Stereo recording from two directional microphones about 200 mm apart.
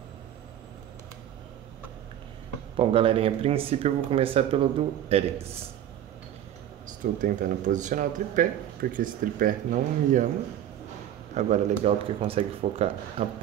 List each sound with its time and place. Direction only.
2.8 s speech: 25° right (ahead or behind)
7.0 s speech: 40° right (ahead or behind)
11.3 s speech: 35° right (ahead or behind)